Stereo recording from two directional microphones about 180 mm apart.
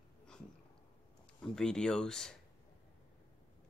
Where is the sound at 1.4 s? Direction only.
5° left (ahead or behind).